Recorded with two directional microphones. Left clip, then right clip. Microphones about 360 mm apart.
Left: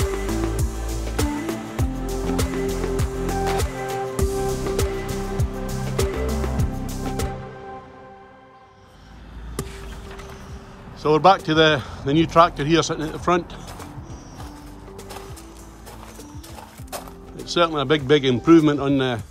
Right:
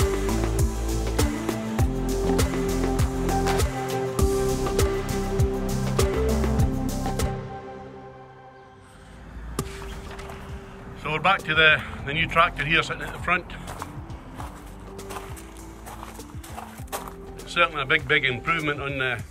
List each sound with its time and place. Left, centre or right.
0.0 s music: centre
9.6 s a sound: centre
11.0 s speech: centre
17.5 s speech: centre